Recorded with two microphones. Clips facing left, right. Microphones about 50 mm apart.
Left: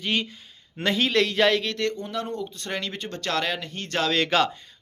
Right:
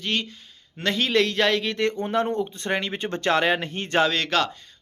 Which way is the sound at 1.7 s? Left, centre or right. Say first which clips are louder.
Right 3 dB; right.